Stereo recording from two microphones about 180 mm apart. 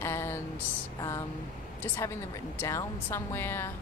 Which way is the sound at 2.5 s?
15° left (ahead or behind).